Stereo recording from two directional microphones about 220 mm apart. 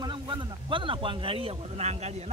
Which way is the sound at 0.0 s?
20° right (ahead or behind).